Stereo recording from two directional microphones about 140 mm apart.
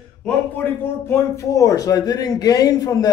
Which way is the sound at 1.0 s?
20° left (ahead or behind).